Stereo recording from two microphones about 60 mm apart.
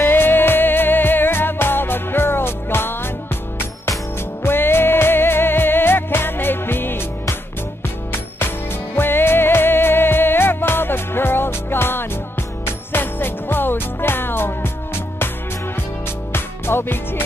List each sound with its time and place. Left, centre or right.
0.0 s music: left
4.4 s music: left
16.3 s music: left